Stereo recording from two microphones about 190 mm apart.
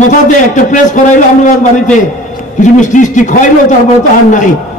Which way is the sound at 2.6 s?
40° left (ahead or behind).